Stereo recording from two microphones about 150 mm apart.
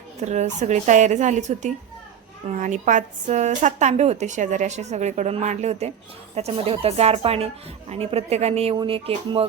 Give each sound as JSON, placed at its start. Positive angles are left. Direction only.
{"t": 0.2, "sound": "speech", "side_deg": -50}
{"t": 8.7, "sound": "speech", "side_deg": -35}